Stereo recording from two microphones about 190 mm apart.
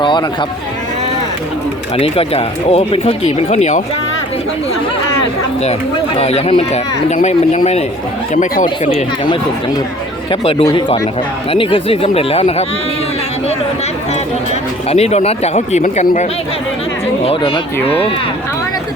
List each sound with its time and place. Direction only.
0.0 s speech: 25° left (ahead or behind)
2.0 s speech: 30° left (ahead or behind)
6.1 s speech: 35° left (ahead or behind)
8.9 s speech: 30° left (ahead or behind)
10.6 s speech: 20° left (ahead or behind)
14.8 s speech: 35° left (ahead or behind)
17.2 s speech: 25° left (ahead or behind)